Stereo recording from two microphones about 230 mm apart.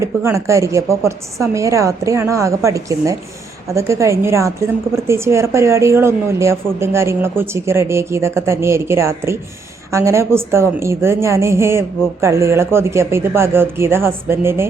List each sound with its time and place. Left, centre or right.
0.0 s a woman's voice: centre